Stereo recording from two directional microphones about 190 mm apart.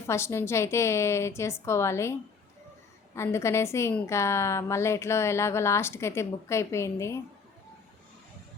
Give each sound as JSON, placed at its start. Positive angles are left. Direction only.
{"t": 0.1, "sound": "a woman's voice", "side_deg": 15}
{"t": 3.2, "sound": "a woman's voice", "side_deg": 15}